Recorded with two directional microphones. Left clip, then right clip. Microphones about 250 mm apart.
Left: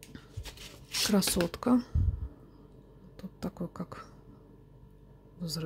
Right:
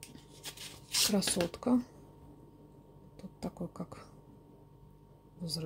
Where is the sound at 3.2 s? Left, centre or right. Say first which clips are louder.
Left 2 dB; centre.